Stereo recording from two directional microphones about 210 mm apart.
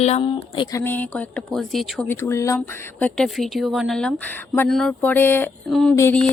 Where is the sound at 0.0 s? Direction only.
30° left (ahead or behind).